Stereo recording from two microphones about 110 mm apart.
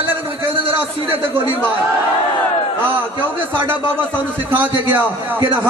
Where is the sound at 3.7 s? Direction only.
20° right (ahead or behind).